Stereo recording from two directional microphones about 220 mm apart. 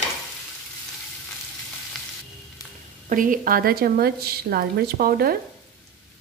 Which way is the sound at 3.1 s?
40° right (ahead or behind).